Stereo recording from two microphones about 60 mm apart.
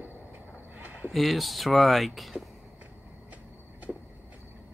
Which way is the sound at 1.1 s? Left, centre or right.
Centre.